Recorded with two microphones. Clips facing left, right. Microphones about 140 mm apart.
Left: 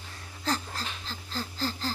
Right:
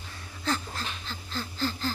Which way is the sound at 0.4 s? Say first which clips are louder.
Right 1 dB; 35° left (ahead or behind).